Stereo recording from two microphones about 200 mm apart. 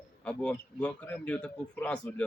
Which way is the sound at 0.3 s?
5° left (ahead or behind).